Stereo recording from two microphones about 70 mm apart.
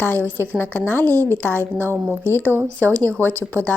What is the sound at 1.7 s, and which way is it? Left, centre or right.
Speech, right.